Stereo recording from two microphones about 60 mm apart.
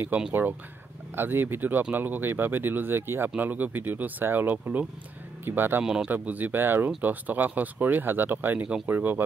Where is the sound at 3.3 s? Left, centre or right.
Right.